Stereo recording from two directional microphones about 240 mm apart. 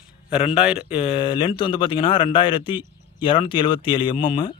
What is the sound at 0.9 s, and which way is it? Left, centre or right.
Speech, left.